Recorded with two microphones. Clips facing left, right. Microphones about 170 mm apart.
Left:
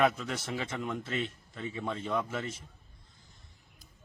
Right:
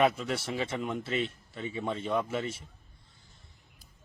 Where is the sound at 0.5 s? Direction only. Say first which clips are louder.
Right 2 dB; 30° right (ahead or behind).